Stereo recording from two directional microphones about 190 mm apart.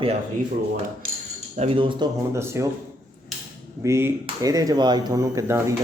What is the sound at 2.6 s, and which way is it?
Speech, 15° right (ahead or behind).